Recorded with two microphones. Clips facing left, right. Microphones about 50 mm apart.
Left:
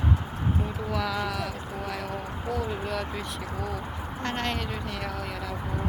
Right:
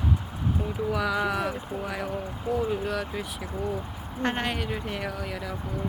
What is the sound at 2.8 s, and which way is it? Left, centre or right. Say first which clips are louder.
Speech: right 1 dB; centre.